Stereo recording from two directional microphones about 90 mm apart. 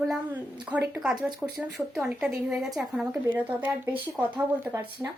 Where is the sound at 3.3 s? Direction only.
20° right (ahead or behind).